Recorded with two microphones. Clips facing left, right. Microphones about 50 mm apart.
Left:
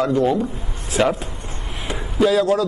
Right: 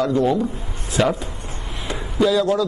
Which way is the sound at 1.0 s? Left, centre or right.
Centre.